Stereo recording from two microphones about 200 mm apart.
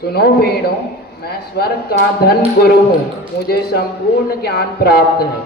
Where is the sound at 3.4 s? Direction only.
50° left (ahead or behind).